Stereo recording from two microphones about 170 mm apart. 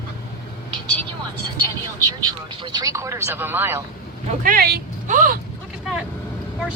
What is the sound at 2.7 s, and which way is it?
Speech, 20° right (ahead or behind).